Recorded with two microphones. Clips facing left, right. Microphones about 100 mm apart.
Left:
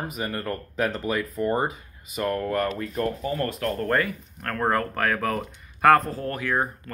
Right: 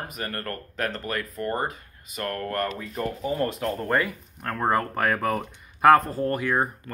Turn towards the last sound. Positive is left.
turn(degrees=-10)  # may be behind; listen again after turning